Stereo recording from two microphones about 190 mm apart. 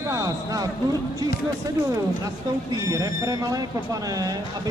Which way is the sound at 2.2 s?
20° right (ahead or behind).